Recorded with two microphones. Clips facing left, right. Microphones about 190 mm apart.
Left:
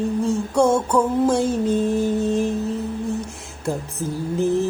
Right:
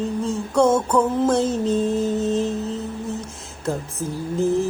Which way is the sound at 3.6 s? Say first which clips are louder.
Even; 15° left (ahead or behind).